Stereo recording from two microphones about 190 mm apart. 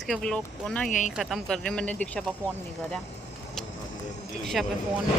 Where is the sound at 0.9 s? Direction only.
40° left (ahead or behind).